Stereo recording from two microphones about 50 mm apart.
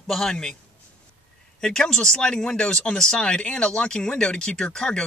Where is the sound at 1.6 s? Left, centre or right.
Centre.